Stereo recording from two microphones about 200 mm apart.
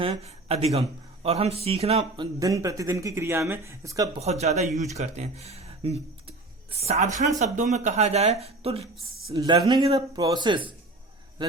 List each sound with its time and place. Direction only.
0.0 s a man's voice: 30° right (ahead or behind)
2.4 s speech: 15° right (ahead or behind)
4.2 s a man's voice: 35° right (ahead or behind)
9.3 s speech: 20° right (ahead or behind)